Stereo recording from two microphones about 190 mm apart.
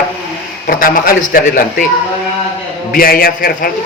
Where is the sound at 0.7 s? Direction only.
50° left (ahead or behind).